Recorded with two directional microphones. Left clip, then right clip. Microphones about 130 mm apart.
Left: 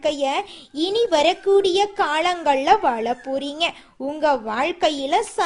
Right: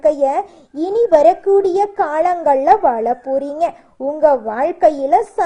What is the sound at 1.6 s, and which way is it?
A woman's voice, 40° left (ahead or behind).